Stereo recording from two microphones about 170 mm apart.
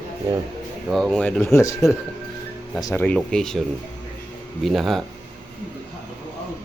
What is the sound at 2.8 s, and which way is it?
Speech, 10° left (ahead or behind).